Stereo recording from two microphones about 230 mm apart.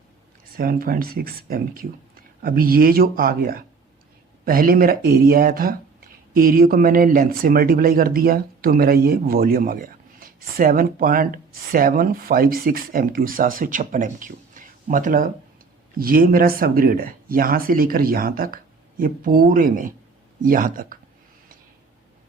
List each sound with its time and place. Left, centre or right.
0.5 s speech: right